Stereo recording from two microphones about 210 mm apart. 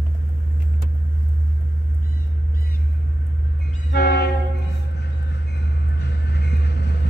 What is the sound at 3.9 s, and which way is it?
Train, 50° left (ahead or behind).